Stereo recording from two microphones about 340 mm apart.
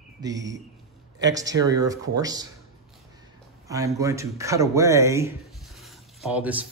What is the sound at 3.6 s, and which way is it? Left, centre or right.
Speech, centre.